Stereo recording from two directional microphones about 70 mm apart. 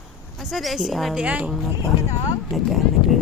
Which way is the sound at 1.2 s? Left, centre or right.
Centre.